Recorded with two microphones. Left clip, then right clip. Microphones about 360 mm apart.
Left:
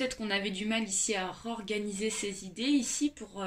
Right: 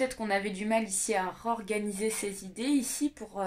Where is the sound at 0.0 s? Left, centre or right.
Centre.